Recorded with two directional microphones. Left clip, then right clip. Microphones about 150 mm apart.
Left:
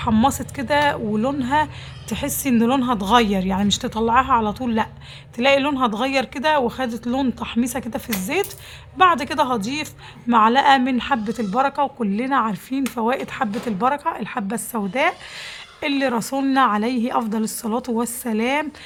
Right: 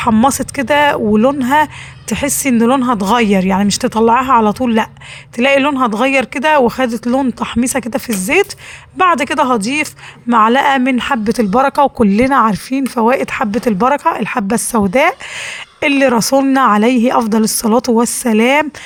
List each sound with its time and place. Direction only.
0.3 s speech: 35° right (ahead or behind)